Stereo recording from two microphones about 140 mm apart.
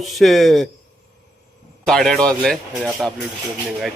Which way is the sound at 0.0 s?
Centre (ahead or behind).